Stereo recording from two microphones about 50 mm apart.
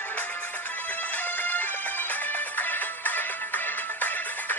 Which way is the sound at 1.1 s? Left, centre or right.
Left.